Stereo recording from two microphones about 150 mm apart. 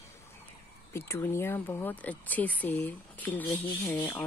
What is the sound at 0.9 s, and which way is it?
Speech, 15° left (ahead or behind).